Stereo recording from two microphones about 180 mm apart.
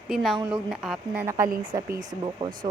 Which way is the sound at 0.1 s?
Centre (ahead or behind).